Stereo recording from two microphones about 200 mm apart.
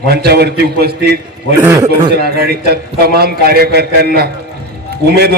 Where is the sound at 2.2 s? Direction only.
50° right (ahead or behind).